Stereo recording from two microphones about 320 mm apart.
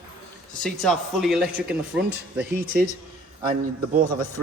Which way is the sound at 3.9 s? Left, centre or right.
Right.